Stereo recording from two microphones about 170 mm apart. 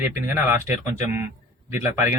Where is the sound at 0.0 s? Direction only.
15° right (ahead or behind).